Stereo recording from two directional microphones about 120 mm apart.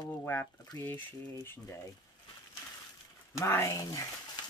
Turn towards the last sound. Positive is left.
turn(degrees=25)  # may be behind; listen again after turning